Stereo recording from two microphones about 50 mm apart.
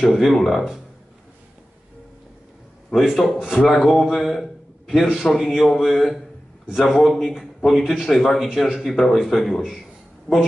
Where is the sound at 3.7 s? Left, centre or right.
Centre.